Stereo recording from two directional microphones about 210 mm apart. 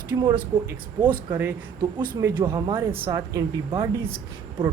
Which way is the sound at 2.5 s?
20° right (ahead or behind).